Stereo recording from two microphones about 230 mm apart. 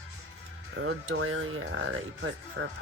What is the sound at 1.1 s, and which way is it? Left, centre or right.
Speech, right.